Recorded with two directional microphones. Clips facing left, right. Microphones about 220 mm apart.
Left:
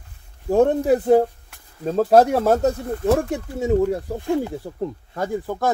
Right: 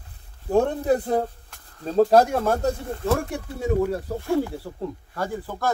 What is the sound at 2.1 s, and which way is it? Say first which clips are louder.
Speech: left 3 dB; 20° left (ahead or behind).